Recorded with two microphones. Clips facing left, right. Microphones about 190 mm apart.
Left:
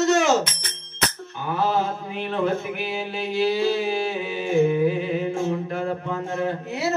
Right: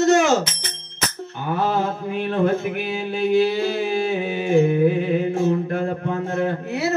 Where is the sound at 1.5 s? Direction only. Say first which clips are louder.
Right 1 dB; 55° right (ahead or behind).